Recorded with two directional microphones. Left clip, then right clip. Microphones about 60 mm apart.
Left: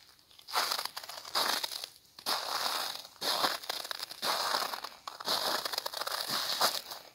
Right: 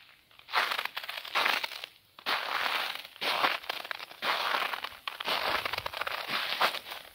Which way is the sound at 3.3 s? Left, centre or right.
Centre.